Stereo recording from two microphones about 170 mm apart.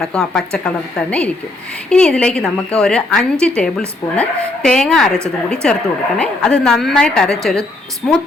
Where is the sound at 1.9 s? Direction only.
5° left (ahead or behind).